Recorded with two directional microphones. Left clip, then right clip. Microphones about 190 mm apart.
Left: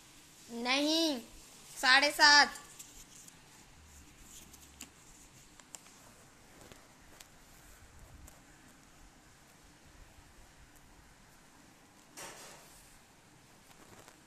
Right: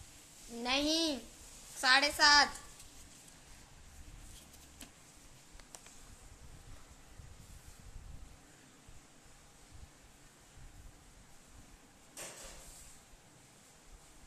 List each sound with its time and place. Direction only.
0.6 s a child's voice: 25° left (ahead or behind)